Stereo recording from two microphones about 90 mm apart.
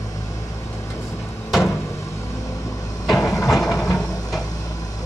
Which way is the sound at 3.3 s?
35° left (ahead or behind).